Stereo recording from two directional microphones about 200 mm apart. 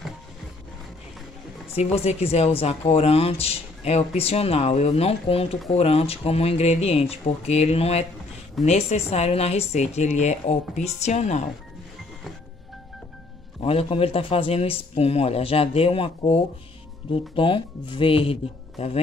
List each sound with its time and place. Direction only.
1.8 s speech: 30° left (ahead or behind)
13.6 s a man's voice: 30° left (ahead or behind)